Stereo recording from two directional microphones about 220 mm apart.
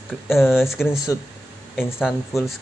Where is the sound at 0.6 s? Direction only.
10° left (ahead or behind).